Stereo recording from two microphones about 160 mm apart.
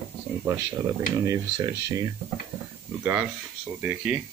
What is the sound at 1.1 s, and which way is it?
Speech, 20° right (ahead or behind).